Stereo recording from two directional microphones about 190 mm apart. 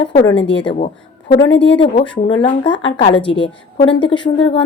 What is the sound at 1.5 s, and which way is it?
Speech, 70° left (ahead or behind).